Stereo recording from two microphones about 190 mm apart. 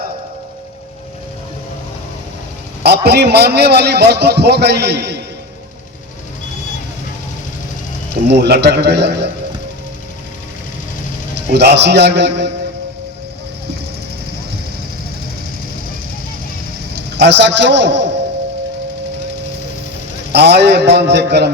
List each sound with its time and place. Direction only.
2.8 s a man's voice: 60° right (ahead or behind)
8.1 s a man's voice: 60° right (ahead or behind)
11.3 s a man's voice: 60° right (ahead or behind)
16.9 s a man's voice: 65° right (ahead or behind)
20.3 s a man's voice: 60° right (ahead or behind)